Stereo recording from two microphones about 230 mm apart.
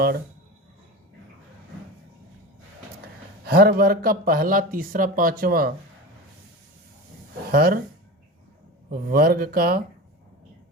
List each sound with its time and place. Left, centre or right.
3.4 s speech: right
7.5 s speech: right
8.9 s speech: right